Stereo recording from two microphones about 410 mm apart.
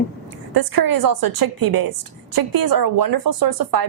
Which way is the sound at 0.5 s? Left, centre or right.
Right.